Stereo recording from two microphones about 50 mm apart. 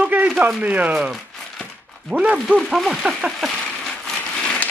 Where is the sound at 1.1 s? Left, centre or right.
Centre.